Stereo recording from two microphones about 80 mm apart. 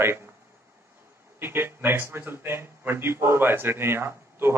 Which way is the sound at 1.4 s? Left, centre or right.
Right.